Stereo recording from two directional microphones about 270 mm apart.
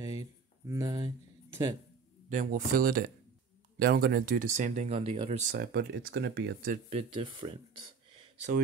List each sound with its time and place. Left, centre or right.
0.0 s a sound: centre
2.2 s speech: right
5.5 s speech: right; by 7.8 s centre